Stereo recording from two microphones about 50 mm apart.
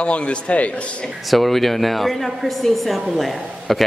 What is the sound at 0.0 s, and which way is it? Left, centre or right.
Speech, left.